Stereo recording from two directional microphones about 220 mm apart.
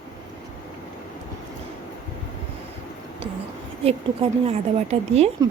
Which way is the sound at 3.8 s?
25° right (ahead or behind).